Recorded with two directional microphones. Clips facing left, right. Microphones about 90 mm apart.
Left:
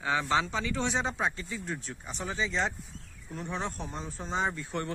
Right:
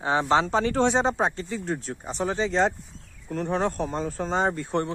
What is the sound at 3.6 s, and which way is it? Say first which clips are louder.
Speech: right 10 dB; 70° right (ahead or behind).